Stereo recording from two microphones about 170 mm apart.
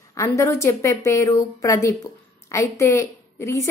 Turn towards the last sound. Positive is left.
turn(degrees=15)  # may be behind; listen again after turning